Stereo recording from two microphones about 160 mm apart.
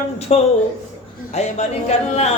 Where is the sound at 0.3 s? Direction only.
40° left (ahead or behind).